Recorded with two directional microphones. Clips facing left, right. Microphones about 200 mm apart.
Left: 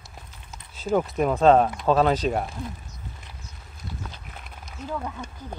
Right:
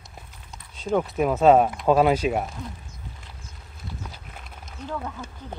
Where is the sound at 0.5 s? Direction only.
5° left (ahead or behind).